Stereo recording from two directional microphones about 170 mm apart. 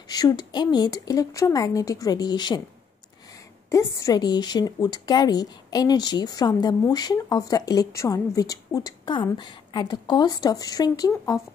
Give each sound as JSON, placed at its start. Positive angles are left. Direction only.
{"t": 0.1, "sound": "a woman's voice", "side_deg": 20}
{"t": 3.7, "sound": "a woman's voice", "side_deg": 20}